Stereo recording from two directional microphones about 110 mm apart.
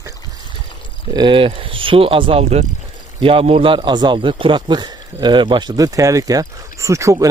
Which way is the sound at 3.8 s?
45° right (ahead or behind).